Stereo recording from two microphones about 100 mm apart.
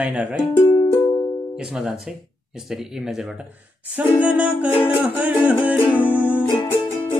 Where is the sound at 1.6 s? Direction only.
5° right (ahead or behind).